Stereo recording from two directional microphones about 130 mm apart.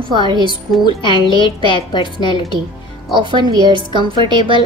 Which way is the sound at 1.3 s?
40° left (ahead or behind).